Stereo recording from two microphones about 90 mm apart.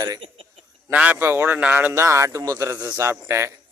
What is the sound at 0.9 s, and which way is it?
A man's voice, 20° right (ahead or behind).